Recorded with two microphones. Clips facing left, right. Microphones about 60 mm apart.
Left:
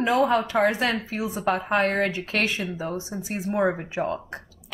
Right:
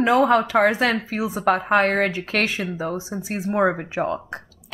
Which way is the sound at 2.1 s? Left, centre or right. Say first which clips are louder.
Right 2 dB; right.